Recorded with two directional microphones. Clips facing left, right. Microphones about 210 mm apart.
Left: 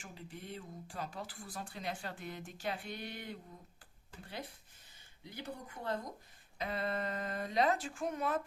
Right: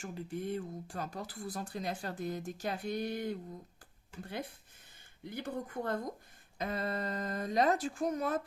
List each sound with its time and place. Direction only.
0.0 s speech: 50° right (ahead or behind)
5.2 s speech: 55° right (ahead or behind)